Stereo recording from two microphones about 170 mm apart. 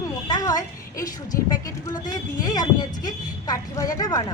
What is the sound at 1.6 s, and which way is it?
Speech, 20° left (ahead or behind).